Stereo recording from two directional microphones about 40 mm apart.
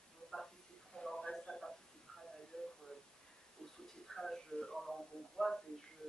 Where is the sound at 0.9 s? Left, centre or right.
Centre.